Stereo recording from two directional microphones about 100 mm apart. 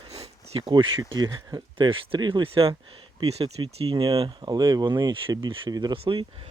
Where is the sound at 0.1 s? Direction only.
90° right.